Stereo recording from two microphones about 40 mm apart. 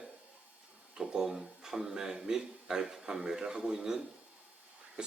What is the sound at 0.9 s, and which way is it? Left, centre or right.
Speech, centre.